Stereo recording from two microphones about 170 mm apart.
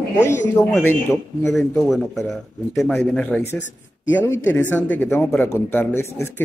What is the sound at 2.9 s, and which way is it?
Speech, 10° left (ahead or behind).